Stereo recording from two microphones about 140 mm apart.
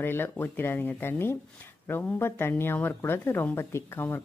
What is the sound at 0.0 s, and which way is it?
Speech, 15° left (ahead or behind).